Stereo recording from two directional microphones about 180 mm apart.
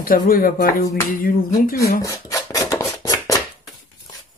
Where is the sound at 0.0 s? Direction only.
50° left (ahead or behind).